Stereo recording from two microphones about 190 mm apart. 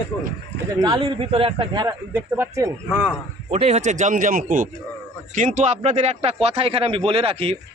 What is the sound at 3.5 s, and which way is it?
A man's voice, 35° right (ahead or behind).